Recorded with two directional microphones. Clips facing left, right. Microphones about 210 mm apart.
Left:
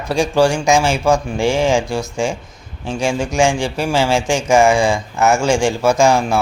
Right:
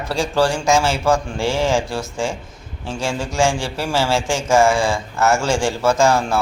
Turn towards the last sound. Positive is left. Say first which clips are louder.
# left 2 dB
turn(degrees=15)  # may be behind; listen again after turning